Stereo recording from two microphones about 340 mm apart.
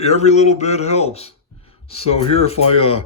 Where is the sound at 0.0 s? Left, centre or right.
Centre.